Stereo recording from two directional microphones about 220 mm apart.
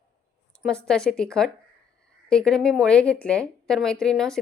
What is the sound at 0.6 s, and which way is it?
A woman's voice, centre (ahead or behind).